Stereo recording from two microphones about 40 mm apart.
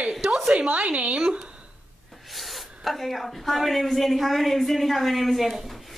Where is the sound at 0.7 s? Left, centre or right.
Right.